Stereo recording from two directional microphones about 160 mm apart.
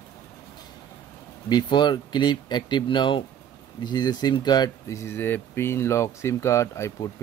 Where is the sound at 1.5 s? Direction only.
30° left (ahead or behind).